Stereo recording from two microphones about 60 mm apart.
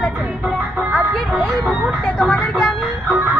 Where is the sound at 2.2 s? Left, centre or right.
Centre.